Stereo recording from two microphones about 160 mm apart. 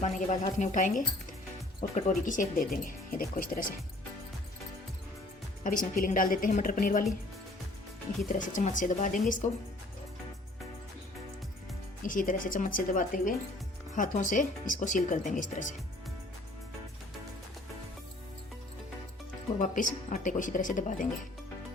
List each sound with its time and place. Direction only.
0.0 s a woman's voice: 50° left (ahead or behind)
5.6 s a woman's voice: 60° left (ahead or behind)
8.3 s speech: 50° left (ahead or behind)
12.0 s a woman's voice: 55° left (ahead or behind)
19.5 s speech: 55° left (ahead or behind)